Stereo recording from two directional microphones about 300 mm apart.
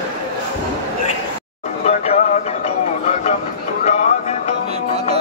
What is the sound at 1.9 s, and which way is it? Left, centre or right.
Music, left.